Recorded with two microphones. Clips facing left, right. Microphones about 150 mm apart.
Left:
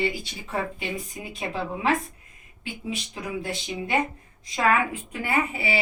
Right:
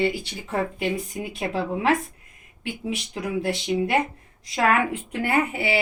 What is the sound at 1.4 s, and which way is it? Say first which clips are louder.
Speech: right 3 dB; 65° right (ahead or behind).